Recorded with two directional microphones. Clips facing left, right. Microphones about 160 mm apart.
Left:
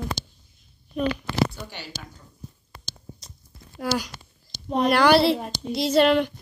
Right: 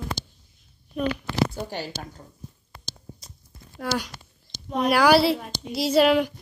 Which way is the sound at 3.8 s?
5° left (ahead or behind).